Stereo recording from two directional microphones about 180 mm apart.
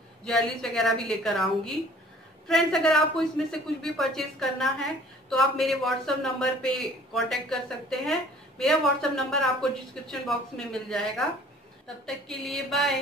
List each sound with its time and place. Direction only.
0.2 s a man's voice: 5° left (ahead or behind)